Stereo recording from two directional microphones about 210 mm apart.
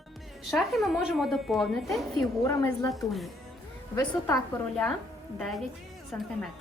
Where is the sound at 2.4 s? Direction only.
15° left (ahead or behind).